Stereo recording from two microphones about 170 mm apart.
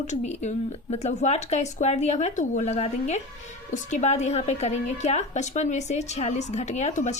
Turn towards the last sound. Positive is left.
turn(degrees=45)  # may be behind; listen again after turning